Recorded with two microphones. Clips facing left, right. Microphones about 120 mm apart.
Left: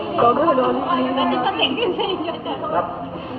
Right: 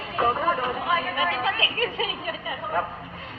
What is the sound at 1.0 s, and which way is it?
A woman's voice, 20° left (ahead or behind).